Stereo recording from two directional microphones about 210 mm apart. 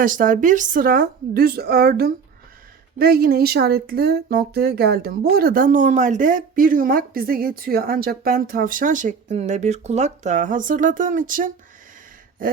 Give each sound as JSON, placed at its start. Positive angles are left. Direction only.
{"t": 0.0, "sound": "a woman's voice", "side_deg": -40}